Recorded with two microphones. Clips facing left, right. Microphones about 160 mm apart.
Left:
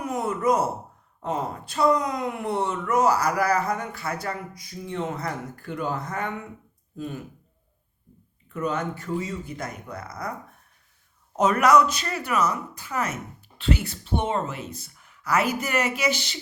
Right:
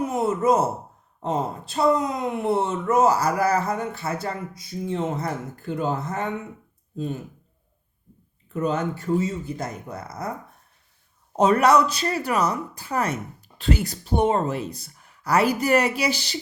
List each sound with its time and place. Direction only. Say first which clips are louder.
0.0 s a sound: right 3 dB; 25° right (ahead or behind)
1.2 s speech: right 3 dB; 25° right (ahead or behind)
8.5 s speech: right 3 dB; 30° right (ahead or behind)
11.3 s speech: right 1 dB; 30° right (ahead or behind)